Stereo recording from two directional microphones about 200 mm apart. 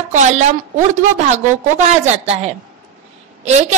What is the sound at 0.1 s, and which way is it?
A woman's voice, 35° right (ahead or behind).